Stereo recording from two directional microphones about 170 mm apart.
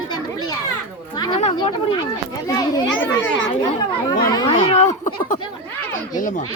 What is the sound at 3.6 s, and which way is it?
Speech, 25° left (ahead or behind).